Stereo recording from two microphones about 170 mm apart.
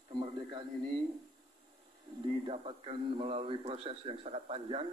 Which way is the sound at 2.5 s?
30° right (ahead or behind).